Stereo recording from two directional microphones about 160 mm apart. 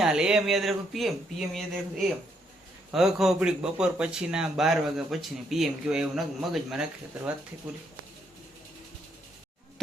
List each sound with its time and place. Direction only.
0.0 s speech: 5° right (ahead or behind)
2.9 s speech: centre (ahead or behind)